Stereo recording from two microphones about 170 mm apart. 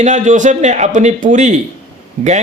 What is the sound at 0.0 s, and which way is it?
A man's voice, 45° right (ahead or behind).